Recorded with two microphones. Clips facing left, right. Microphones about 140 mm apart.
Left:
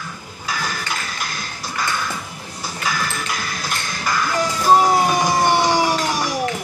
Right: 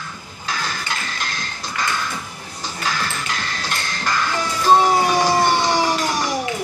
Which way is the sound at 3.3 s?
10° left (ahead or behind).